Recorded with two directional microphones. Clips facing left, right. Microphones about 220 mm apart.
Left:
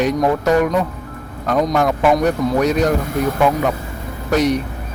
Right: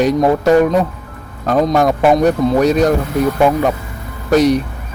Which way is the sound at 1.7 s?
35° right (ahead or behind).